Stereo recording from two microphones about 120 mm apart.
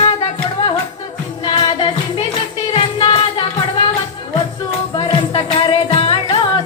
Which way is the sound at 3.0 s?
55° left (ahead or behind).